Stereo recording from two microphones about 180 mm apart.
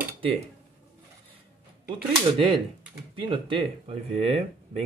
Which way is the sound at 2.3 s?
30° right (ahead or behind).